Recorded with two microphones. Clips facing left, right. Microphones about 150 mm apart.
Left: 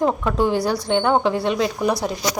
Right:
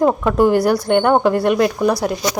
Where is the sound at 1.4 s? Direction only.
60° right (ahead or behind).